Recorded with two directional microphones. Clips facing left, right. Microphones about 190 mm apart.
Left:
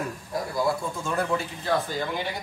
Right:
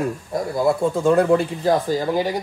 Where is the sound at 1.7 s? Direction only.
40° right (ahead or behind).